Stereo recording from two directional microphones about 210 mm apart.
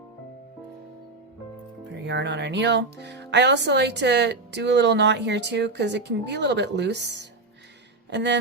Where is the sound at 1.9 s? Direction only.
55° right (ahead or behind).